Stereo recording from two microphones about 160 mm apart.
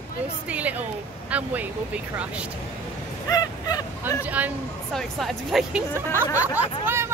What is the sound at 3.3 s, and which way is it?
Fowl, 25° left (ahead or behind).